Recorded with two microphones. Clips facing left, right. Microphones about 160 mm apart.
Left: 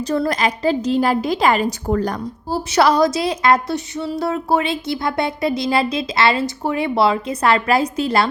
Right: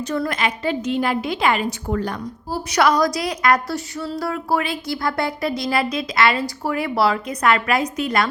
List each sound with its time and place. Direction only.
0.0 s a woman's voice: 35° left (ahead or behind)
2.5 s a woman's voice: 25° left (ahead or behind)